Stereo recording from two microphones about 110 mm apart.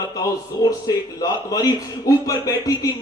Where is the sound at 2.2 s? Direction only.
30° left (ahead or behind).